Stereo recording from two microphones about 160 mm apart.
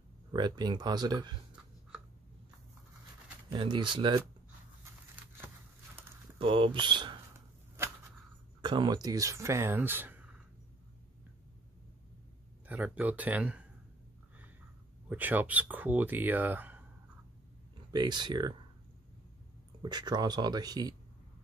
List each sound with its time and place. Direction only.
0.3 s speech: 25° right (ahead or behind)
3.5 s speech: 30° right (ahead or behind)
6.3 s speech: 35° right (ahead or behind)
7.3 s a sound: 15° right (ahead or behind)
8.5 s speech: 30° right (ahead or behind); by 10.2 s 10° right (ahead or behind)
12.6 s speech: 10° right (ahead or behind)
15.0 s speech: 10° right (ahead or behind)
17.9 s speech: 25° right (ahead or behind)
19.8 s speech: 25° right (ahead or behind)